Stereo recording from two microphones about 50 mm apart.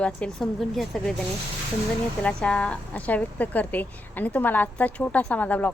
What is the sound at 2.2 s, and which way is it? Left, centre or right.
A woman's voice, left.